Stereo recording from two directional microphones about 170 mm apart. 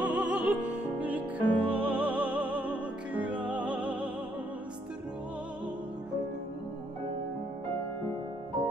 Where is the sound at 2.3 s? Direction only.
30° right (ahead or behind).